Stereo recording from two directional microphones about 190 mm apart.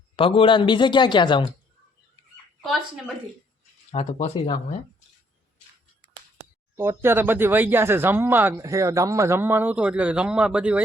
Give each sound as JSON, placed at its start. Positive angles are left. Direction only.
{"t": 0.2, "sound": "a man's voice", "side_deg": 30}
{"t": 3.9, "sound": "speech", "side_deg": 35}
{"t": 6.7, "sound": "speech", "side_deg": -15}